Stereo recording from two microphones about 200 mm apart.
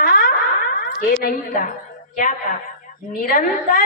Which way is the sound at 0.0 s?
50° left (ahead or behind).